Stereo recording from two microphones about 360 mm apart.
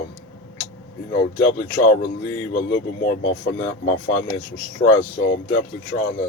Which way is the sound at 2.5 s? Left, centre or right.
Left.